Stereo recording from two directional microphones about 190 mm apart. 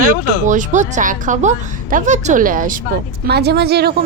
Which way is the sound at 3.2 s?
60° right (ahead or behind).